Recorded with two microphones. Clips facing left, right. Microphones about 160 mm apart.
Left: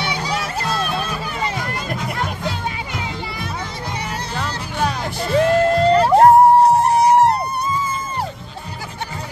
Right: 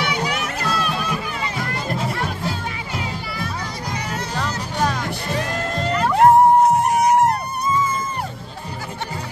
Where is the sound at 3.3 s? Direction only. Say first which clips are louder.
Even; 25° left (ahead or behind).